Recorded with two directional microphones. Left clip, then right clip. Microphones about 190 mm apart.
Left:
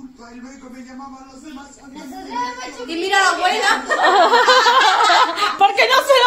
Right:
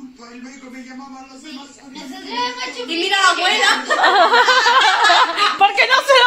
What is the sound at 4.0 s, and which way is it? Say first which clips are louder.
Speech: even; 5° left (ahead or behind).